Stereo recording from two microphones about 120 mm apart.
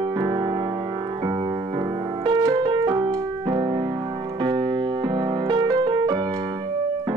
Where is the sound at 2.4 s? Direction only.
35° right (ahead or behind).